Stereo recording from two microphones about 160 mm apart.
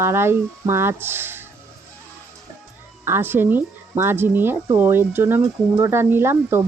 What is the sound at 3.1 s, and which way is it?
Speech, 15° right (ahead or behind).